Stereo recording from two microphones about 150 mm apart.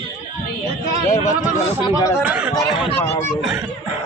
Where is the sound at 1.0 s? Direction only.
55° left (ahead or behind).